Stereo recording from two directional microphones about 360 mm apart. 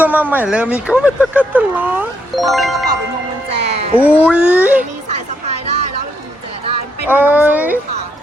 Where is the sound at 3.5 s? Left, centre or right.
Centre.